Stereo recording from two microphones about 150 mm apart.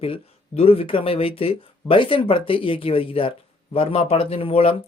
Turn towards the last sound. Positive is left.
turn(degrees=40)  # may be behind; listen again after turning